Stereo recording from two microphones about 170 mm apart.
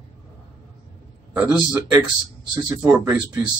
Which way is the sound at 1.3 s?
10° right (ahead or behind).